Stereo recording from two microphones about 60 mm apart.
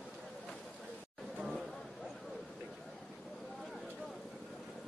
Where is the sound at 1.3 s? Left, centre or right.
Centre.